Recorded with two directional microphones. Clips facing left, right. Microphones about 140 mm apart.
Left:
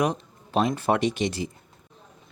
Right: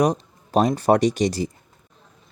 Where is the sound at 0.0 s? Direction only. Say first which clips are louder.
Right 5 dB; 40° right (ahead or behind).